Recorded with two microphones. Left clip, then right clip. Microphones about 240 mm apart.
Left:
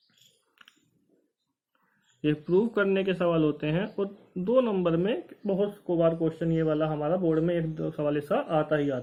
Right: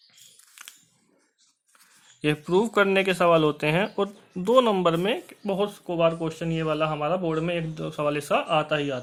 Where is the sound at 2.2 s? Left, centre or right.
Right.